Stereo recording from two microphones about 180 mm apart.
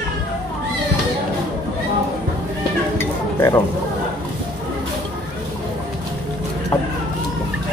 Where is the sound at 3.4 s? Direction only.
15° left (ahead or behind).